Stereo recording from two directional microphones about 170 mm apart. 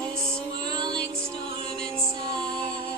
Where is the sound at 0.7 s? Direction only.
25° right (ahead or behind).